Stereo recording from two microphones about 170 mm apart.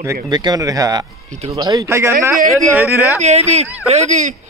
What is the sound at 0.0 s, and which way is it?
Speech, 20° right (ahead or behind).